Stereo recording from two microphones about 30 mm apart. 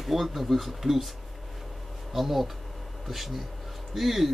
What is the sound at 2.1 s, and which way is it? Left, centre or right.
Speech, centre.